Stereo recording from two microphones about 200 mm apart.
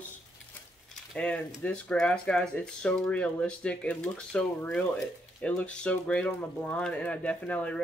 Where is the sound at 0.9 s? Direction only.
5° left (ahead or behind).